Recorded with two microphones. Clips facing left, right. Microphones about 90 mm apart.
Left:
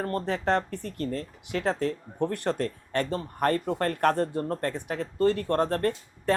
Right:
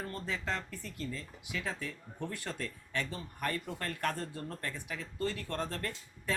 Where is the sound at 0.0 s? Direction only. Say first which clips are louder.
Left 11 dB; 60° left (ahead or behind).